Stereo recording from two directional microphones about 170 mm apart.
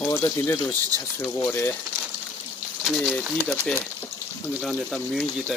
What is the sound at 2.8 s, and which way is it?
Speech, centre (ahead or behind).